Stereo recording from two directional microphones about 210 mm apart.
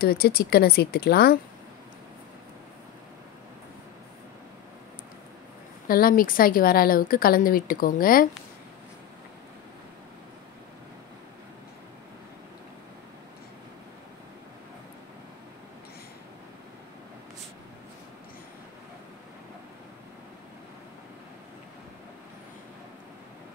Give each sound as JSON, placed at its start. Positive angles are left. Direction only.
{"t": 0.0, "sound": "speech", "side_deg": 45}
{"t": 5.9, "sound": "speech", "side_deg": 45}